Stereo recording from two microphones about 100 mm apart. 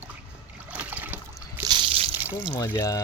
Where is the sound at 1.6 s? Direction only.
55° right (ahead or behind).